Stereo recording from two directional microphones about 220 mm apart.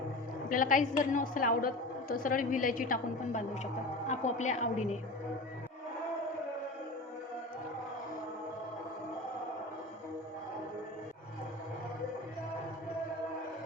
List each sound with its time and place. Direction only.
0.4 s a woman's voice: 40° left (ahead or behind)